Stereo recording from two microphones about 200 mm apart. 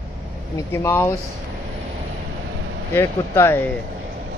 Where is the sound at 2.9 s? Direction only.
10° left (ahead or behind).